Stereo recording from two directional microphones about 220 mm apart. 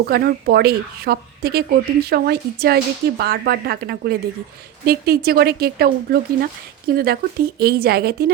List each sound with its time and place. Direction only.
0.0 s speech: 45° right (ahead or behind)